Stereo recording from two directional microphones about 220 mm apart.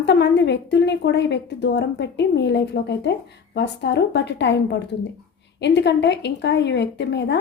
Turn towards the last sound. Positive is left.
turn(degrees=50)  # may be behind; listen again after turning